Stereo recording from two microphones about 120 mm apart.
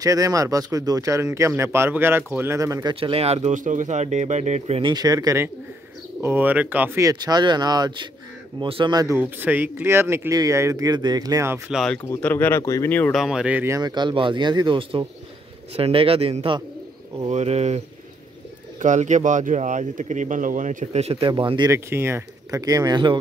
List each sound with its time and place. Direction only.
0.0 s speech: 30° right (ahead or behind)
3.0 s speech: 55° right (ahead or behind)
4.8 s speech: 35° right (ahead or behind)
6.2 s speech: 15° right (ahead or behind)
7.0 s a man's voice: 30° right (ahead or behind)
8.9 s speech: 25° right (ahead or behind)
9.2 s speech: 15° right (ahead or behind)
11.7 s speech: 5° left (ahead or behind)
12.0 s speech: 15° left (ahead or behind)
13.1 s speech: 5° right (ahead or behind)
13.7 s a man's voice: 30° right (ahead or behind); by 16.5 s 55° right (ahead or behind)
17.3 s speech: 65° right (ahead or behind)
18.8 s speech: 90° right; by 21.6 s 45° right (ahead or behind)
21.6 s speech: 20° right (ahead or behind)